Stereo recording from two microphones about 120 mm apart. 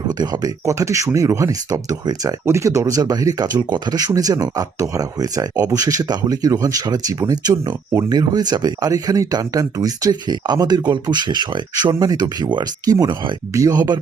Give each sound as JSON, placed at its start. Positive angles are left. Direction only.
{"t": 0.2, "sound": "speech", "side_deg": -30}